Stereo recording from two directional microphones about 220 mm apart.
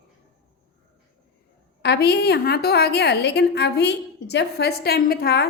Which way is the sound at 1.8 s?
50° left (ahead or behind).